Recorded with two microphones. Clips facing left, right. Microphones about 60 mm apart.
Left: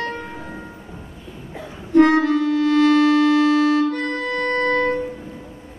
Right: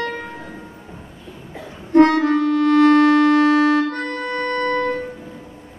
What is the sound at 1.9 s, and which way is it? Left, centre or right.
Music, right.